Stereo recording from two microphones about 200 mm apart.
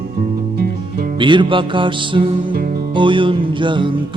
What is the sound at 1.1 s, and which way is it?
Music, 25° right (ahead or behind).